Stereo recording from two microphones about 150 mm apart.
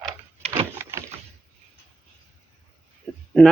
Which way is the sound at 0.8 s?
15° right (ahead or behind).